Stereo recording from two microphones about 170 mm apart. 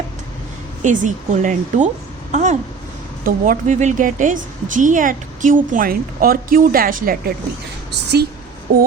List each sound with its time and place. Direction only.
0.8 s a woman's voice: 45° right (ahead or behind)
8.1 s a woman's voice: 70° right (ahead or behind)